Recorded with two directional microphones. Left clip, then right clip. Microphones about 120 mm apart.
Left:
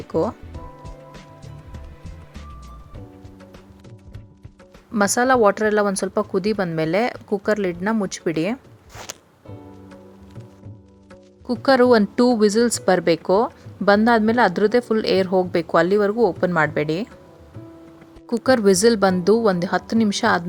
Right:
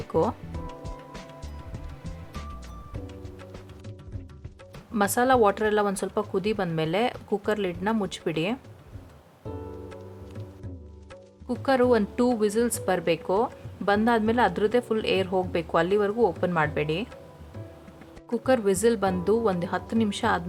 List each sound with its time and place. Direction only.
0.1 s speech: 25° left (ahead or behind)
0.5 s music: centre (ahead or behind)
4.9 s speech: 40° left (ahead or behind)
11.4 s speech: 60° left (ahead or behind)
18.3 s speech: 55° left (ahead or behind)